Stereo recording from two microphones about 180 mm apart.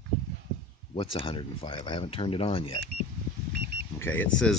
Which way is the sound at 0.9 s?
30° left (ahead or behind).